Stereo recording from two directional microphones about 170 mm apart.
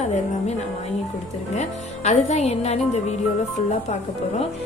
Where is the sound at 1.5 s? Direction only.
45° left (ahead or behind).